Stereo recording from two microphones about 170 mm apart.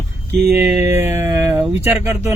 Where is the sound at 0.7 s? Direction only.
15° right (ahead or behind).